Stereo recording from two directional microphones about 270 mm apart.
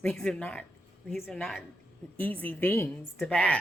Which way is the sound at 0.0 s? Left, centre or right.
Centre.